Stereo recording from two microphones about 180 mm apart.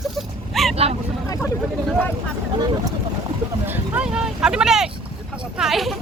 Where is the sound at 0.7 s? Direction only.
35° right (ahead or behind).